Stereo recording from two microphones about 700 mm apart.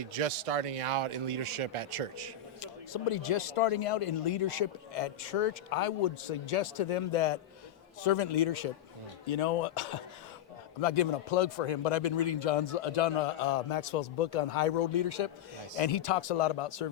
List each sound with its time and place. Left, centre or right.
0.1 s speech: right
2.6 s a man's voice: left
9.3 s speech: left
10.8 s speech: left
11.9 s a man's voice: left
12.4 s a man's voice: left
14.8 s a man's voice: left